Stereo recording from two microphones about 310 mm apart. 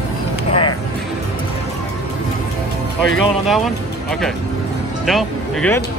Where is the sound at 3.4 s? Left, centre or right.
Centre.